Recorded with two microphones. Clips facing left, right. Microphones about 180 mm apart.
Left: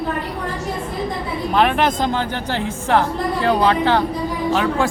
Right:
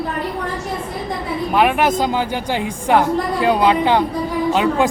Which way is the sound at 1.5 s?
10° right (ahead or behind).